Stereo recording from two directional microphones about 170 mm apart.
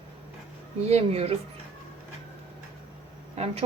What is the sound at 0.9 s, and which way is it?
Speech, 35° right (ahead or behind).